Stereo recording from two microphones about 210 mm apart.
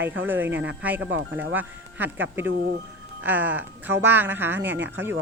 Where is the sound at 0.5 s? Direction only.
60° right (ahead or behind).